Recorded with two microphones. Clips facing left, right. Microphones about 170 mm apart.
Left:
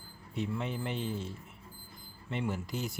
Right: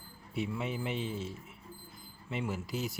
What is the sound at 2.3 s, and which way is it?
Speech, 5° right (ahead or behind).